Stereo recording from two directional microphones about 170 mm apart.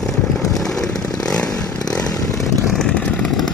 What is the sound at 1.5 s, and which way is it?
Chainsaw, 20° left (ahead or behind).